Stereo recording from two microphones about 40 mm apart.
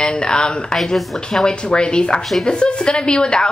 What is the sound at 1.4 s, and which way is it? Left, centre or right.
A woman's voice, left.